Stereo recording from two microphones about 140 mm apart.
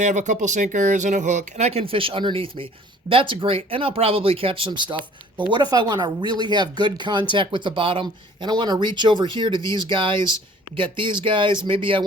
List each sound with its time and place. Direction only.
0.0 s speech: 55° right (ahead or behind); by 12.0 s 40° right (ahead or behind)